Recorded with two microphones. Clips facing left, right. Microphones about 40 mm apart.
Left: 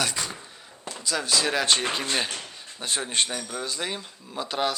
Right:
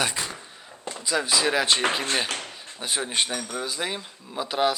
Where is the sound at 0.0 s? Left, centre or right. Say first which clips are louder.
Right 1 dB; centre.